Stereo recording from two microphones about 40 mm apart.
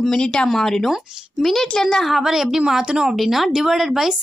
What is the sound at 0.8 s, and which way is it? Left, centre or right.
Speech, centre.